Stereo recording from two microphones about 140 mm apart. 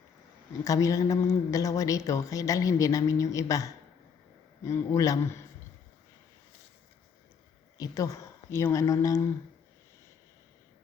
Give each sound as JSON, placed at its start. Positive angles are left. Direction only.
{"t": 0.6, "sound": "a woman's voice", "side_deg": 25}
{"t": 7.8, "sound": "speech", "side_deg": 25}